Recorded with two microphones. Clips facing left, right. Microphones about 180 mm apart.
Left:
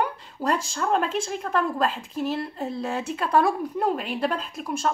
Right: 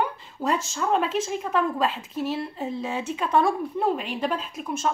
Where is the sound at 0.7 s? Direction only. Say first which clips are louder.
Even; centre (ahead or behind).